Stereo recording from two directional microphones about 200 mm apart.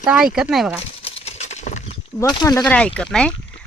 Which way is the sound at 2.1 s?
20° left (ahead or behind).